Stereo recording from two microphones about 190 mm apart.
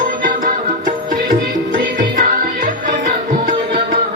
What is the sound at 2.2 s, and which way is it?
Music, 45° right (ahead or behind).